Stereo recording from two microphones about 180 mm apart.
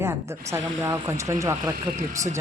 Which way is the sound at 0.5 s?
15° right (ahead or behind).